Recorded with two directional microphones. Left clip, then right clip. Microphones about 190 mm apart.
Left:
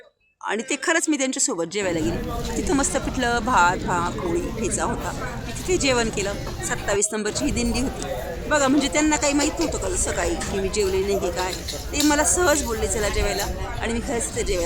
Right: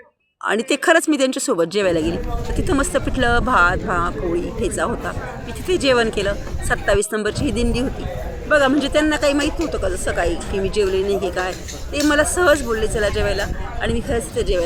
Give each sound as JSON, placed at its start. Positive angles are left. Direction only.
{"t": 0.4, "sound": "a woman's voice", "side_deg": -20}
{"t": 5.6, "sound": "a woman's voice", "side_deg": -15}